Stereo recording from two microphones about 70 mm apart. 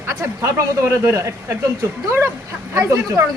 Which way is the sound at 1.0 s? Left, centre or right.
Right.